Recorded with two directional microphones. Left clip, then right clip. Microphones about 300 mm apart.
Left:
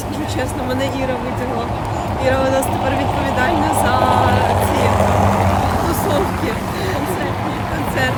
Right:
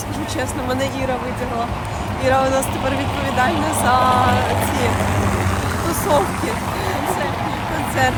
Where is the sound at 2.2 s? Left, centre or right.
Centre.